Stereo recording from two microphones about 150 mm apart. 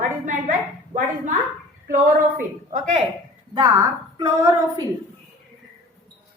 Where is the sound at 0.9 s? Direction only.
60° right (ahead or behind).